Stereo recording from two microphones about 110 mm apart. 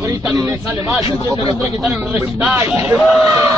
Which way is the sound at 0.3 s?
30° right (ahead or behind).